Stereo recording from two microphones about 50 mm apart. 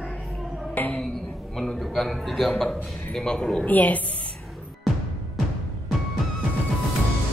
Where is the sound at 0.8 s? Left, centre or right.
Left.